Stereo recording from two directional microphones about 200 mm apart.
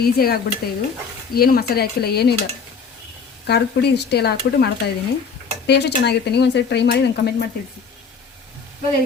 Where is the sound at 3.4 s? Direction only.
55° left (ahead or behind).